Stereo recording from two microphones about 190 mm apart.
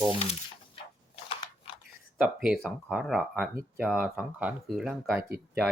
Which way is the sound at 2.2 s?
5° right (ahead or behind).